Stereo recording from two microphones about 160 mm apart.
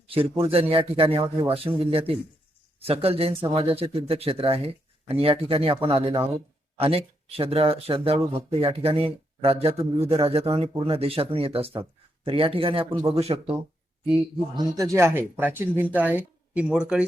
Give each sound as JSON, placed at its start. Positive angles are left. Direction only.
{"t": 0.1, "sound": "speech", "side_deg": -35}
{"t": 14.0, "sound": "speech", "side_deg": -30}